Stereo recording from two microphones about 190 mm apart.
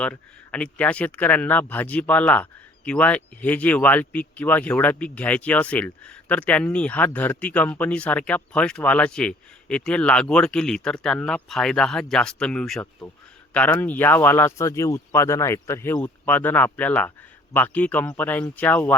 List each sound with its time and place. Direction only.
0.0 s speech: 5° left (ahead or behind)